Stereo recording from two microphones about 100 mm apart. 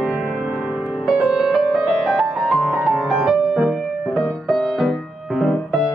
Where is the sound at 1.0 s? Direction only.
5° right (ahead or behind).